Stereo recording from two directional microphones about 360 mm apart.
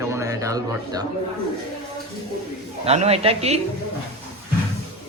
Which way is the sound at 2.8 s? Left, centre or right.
Centre.